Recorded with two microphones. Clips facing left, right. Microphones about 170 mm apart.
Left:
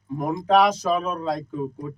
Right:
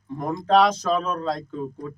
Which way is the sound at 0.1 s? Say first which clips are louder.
Even; 10° left (ahead or behind).